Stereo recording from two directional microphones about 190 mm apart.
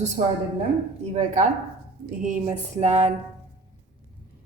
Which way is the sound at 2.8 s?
35° right (ahead or behind).